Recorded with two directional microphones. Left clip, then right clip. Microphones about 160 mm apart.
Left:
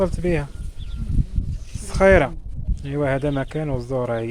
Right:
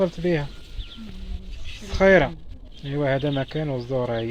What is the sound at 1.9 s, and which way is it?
Speech, 25° left (ahead or behind).